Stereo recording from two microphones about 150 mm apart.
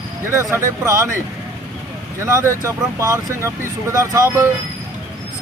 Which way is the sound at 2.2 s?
20° right (ahead or behind).